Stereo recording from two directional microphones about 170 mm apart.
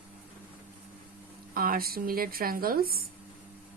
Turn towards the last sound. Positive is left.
turn(degrees=-60)  # may be behind; listen again after turning